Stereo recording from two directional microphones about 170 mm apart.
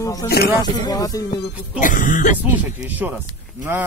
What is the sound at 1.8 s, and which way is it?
Speech, 50° left (ahead or behind).